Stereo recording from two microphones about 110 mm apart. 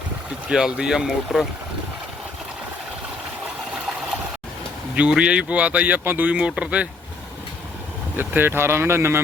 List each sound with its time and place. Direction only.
0.4 s speech: 5° right (ahead or behind)
4.9 s speech: 10° right (ahead or behind)
8.1 s speech: 20° right (ahead or behind)